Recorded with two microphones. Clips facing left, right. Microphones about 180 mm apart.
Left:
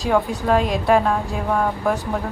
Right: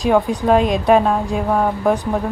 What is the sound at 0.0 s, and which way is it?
A woman's voice, 15° right (ahead or behind).